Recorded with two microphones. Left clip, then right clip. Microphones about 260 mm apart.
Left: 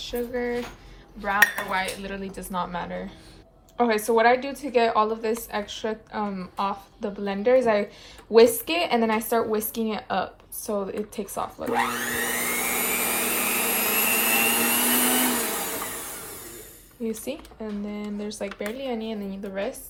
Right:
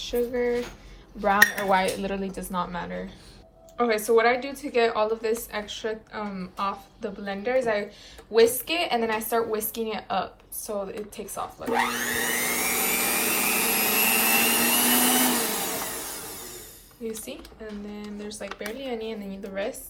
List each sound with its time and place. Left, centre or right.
0.0 s speech: centre
1.2 s dishes: centre
3.8 s a woman's voice: centre
11.7 s vacuum cleaner: centre
17.0 s a woman's voice: centre